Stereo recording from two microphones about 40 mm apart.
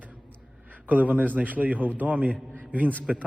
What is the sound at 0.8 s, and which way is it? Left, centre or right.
A man's voice, right.